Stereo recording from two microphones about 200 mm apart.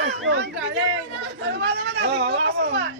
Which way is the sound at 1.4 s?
60° right (ahead or behind).